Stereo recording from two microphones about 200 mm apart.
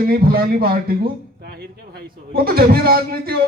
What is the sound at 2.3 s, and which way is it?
Speech, 50° right (ahead or behind).